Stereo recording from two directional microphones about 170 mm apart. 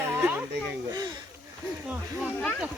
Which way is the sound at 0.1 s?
15° right (ahead or behind).